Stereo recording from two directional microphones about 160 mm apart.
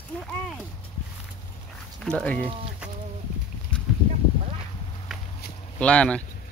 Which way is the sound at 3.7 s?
5° left (ahead or behind).